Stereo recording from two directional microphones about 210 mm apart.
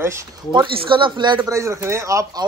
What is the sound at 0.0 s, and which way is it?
Speech, 15° right (ahead or behind).